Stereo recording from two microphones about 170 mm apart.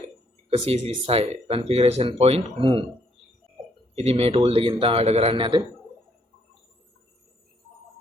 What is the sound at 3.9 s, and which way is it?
Speech, 35° right (ahead or behind).